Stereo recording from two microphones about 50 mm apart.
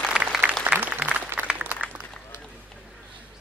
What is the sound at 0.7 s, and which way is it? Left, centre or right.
Applause, right.